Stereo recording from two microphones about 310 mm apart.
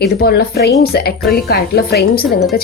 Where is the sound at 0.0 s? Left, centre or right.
Left.